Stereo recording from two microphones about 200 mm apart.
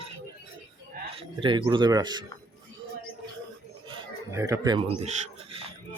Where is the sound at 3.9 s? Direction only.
15° right (ahead or behind).